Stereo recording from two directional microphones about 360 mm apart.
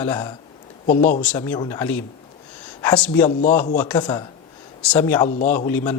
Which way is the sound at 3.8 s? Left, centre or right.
Centre.